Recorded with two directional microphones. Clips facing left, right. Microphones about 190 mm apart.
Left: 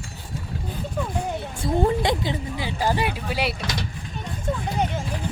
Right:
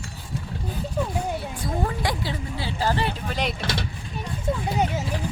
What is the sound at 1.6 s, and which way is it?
Speech, 25° left (ahead or behind).